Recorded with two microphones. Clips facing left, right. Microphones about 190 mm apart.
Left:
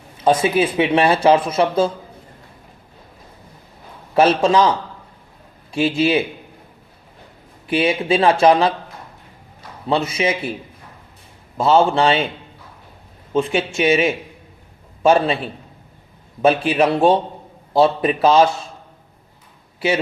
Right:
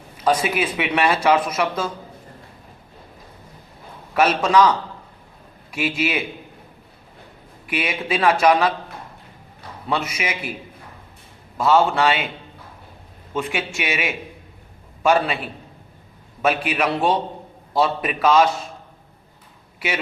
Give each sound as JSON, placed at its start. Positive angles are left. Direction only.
{"t": 0.3, "sound": "speech", "side_deg": 25}
{"t": 4.1, "sound": "speech", "side_deg": 30}
{"t": 5.7, "sound": "speech", "side_deg": 30}
{"t": 7.7, "sound": "speech", "side_deg": 30}
{"t": 9.9, "sound": "speech", "side_deg": 30}
{"t": 11.5, "sound": "speech", "side_deg": 25}
{"t": 13.3, "sound": "speech", "side_deg": 25}